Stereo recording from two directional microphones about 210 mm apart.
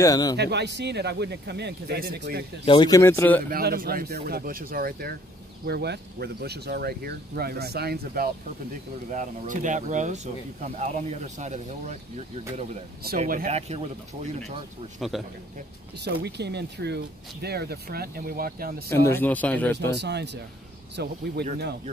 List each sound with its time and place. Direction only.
0.0 s a man's voice: 15° left (ahead or behind)
0.4 s speech: 55° right (ahead or behind)
2.6 s a man's voice: 20° left (ahead or behind)
3.4 s speech: 45° right (ahead or behind)
9.1 s speech: 35° right (ahead or behind)
13.2 s speech: 40° right (ahead or behind)
15.0 s a man's voice: centre (ahead or behind)
16.0 s speech: 50° right (ahead or behind)
18.9 s a man's voice: 10° left (ahead or behind)
19.9 s speech: 55° right (ahead or behind)